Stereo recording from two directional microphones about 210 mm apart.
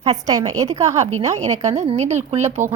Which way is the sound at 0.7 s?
30° right (ahead or behind).